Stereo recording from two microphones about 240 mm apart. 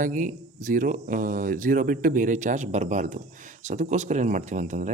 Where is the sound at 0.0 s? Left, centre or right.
Right.